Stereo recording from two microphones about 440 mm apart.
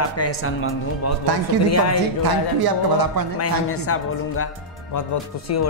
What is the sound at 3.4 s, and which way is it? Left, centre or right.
A man's voice, left.